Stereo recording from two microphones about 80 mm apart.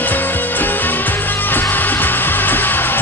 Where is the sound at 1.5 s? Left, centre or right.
Left.